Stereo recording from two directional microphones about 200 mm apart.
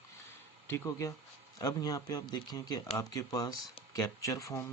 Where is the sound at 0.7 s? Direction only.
15° left (ahead or behind).